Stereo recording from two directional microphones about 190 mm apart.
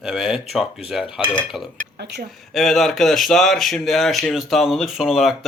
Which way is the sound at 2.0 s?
60° right (ahead or behind).